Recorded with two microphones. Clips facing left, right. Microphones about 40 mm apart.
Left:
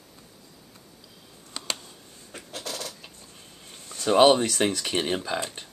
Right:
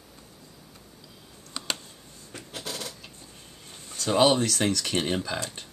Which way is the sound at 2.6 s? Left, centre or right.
Centre.